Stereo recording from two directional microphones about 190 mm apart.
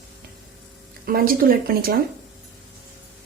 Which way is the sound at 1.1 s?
50° right (ahead or behind).